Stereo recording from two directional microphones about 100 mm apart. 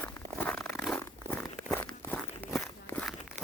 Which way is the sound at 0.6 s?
Centre (ahead or behind).